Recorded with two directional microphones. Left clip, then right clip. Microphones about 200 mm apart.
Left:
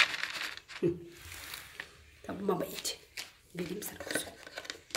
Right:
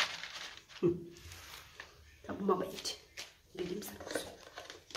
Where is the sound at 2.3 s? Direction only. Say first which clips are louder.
Even; 30° left (ahead or behind).